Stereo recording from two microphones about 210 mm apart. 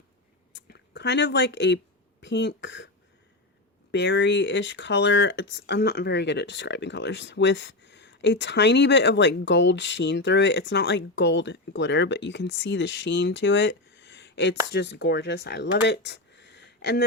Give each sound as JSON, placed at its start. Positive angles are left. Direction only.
{"t": 0.5, "sound": "a sound", "side_deg": 55}
{"t": 2.2, "sound": "speech", "side_deg": 55}
{"t": 3.9, "sound": "speech", "side_deg": 55}